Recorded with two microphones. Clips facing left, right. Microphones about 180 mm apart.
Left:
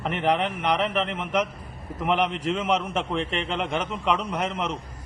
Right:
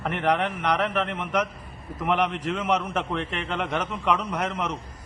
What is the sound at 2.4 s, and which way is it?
A man's voice, 25° left (ahead or behind).